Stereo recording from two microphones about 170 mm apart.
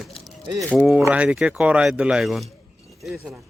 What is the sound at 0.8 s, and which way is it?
A man's voice, 10° right (ahead or behind).